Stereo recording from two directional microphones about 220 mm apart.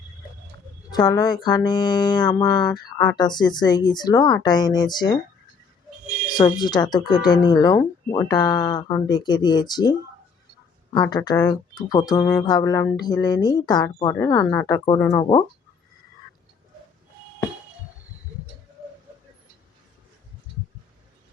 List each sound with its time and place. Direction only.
0.9 s speech: 15° left (ahead or behind)
6.3 s speech: 20° left (ahead or behind)
10.9 s speech: 20° left (ahead or behind)